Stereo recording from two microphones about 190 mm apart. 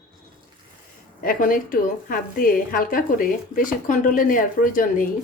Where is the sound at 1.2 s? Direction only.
45° left (ahead or behind).